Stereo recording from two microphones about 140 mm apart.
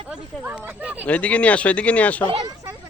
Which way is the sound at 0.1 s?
10° right (ahead or behind).